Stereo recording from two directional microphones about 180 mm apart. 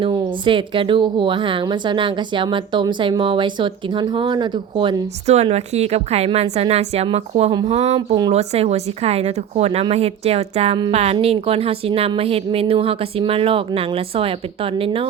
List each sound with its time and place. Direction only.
0.0 s a woman's voice: 30° right (ahead or behind)